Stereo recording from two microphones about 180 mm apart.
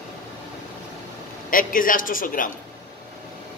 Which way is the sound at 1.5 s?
50° left (ahead or behind).